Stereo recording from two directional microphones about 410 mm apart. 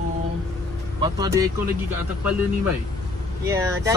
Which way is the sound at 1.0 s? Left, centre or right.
Centre.